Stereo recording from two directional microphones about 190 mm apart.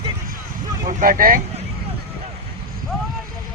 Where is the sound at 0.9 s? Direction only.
45° right (ahead or behind).